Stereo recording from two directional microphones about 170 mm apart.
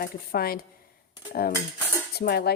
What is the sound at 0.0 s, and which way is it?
Speech, 65° left (ahead or behind).